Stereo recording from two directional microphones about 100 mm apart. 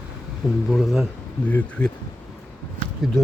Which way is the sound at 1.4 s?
15° left (ahead or behind).